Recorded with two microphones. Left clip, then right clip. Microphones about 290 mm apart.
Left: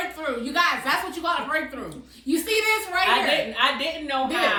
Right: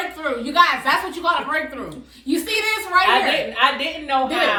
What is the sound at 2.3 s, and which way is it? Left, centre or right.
A child's voice, centre.